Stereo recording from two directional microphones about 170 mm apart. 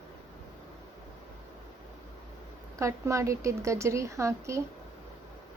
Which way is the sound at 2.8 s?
20° right (ahead or behind).